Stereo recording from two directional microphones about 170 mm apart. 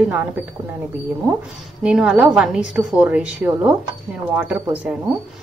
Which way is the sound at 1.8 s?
5° right (ahead or behind).